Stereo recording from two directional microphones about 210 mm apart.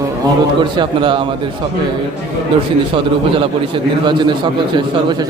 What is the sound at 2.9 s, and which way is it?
A man's voice, 25° right (ahead or behind).